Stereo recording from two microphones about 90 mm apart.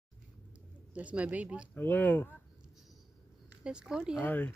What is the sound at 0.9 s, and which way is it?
Speech, 15° right (ahead or behind).